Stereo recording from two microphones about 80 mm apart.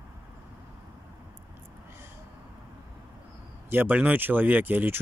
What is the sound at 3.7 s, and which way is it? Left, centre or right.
Speech, right.